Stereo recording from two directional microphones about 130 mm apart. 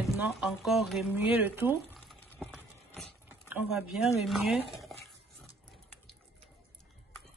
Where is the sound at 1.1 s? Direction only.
15° right (ahead or behind).